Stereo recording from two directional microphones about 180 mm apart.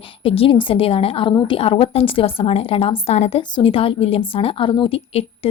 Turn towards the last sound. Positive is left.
turn(degrees=30)  # may be behind; listen again after turning